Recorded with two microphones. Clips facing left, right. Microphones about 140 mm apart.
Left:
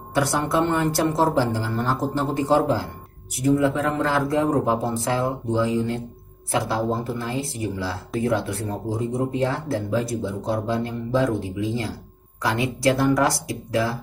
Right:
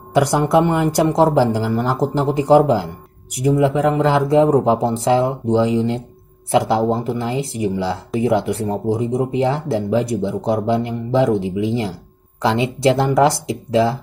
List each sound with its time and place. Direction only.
0.1 s speech: 15° right (ahead or behind)